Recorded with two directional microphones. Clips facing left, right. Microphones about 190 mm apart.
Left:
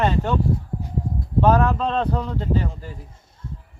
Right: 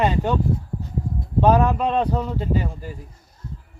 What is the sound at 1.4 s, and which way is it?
Speech, 15° right (ahead or behind).